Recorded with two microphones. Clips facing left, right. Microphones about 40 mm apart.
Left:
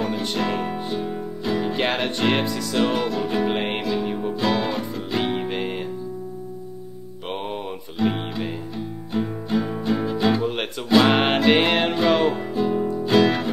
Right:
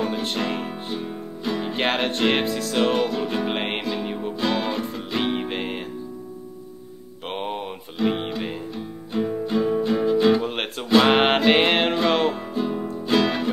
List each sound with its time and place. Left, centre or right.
0.0 s music: centre
2.0 s speech: centre
2.4 s music: right
2.7 s music: centre
8.0 s music: centre
10.4 s music: centre